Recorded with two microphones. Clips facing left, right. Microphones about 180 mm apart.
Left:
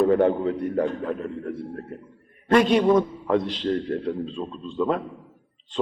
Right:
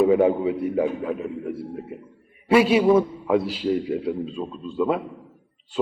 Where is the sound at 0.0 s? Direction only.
5° right (ahead or behind).